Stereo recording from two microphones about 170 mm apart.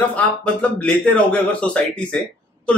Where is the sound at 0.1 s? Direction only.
5° left (ahead or behind).